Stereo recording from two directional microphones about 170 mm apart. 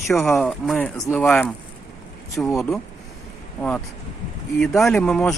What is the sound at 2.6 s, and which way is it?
Speech, centre (ahead or behind).